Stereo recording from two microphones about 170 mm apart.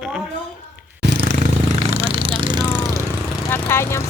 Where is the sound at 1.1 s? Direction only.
70° right (ahead or behind).